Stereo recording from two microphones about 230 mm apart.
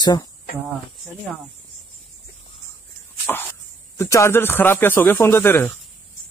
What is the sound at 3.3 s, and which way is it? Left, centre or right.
Speech, centre.